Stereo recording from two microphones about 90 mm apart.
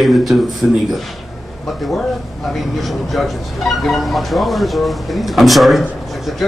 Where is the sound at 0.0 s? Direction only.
Centre (ahead or behind).